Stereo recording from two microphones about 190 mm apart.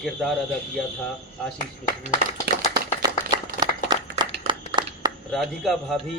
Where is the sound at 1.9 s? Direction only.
45° left (ahead or behind).